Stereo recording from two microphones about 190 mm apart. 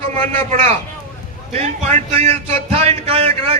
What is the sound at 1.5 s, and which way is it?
Speech, 35° right (ahead or behind).